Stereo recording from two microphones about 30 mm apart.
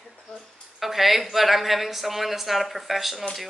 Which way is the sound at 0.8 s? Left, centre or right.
Centre.